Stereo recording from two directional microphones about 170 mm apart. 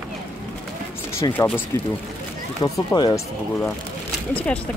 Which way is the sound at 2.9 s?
25° left (ahead or behind).